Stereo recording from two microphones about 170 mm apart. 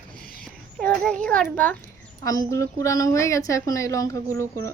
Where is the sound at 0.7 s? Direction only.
5° left (ahead or behind).